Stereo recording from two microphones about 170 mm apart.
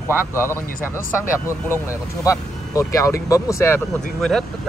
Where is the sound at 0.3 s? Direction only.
15° left (ahead or behind).